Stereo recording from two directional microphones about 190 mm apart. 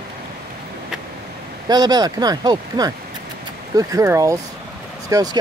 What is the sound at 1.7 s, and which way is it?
A man's voice, 20° right (ahead or behind).